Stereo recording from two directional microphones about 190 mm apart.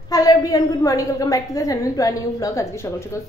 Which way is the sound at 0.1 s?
20° left (ahead or behind).